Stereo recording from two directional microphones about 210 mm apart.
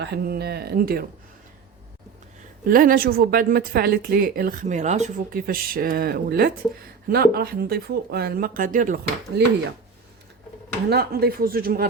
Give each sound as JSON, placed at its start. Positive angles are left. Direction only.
{"t": 0.0, "sound": "a woman's voice", "side_deg": -50}
{"t": 2.6, "sound": "a woman's voice", "side_deg": -40}
{"t": 9.3, "sound": "a woman's voice", "side_deg": -50}
{"t": 10.8, "sound": "a woman's voice", "side_deg": -50}